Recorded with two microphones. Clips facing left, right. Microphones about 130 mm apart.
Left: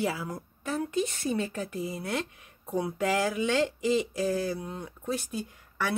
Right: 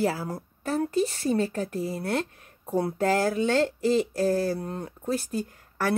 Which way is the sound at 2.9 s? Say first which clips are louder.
Right 3 dB; 40° right (ahead or behind).